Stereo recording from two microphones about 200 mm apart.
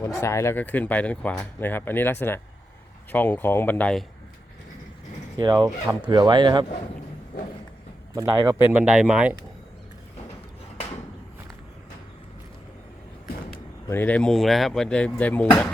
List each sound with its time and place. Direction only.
0.0 s speech: 15° left (ahead or behind)
5.4 s speech: 20° right (ahead or behind)
8.1 s speech: 15° right (ahead or behind)
13.9 s speech: 10° left (ahead or behind)